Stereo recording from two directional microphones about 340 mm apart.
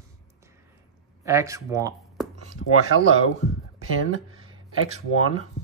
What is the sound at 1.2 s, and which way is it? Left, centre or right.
Speech, centre.